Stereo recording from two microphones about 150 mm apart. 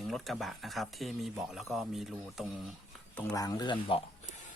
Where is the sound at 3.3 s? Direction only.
25° left (ahead or behind).